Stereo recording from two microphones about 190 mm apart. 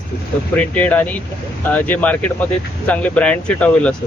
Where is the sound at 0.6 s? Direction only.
5° left (ahead or behind).